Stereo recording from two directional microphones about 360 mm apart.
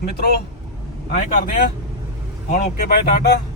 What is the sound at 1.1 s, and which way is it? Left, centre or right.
Speech, left.